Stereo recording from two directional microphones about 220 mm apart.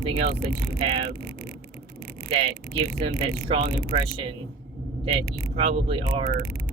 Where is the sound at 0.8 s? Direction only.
25° right (ahead or behind).